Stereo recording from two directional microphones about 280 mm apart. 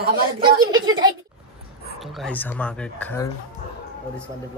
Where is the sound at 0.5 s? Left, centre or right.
Centre.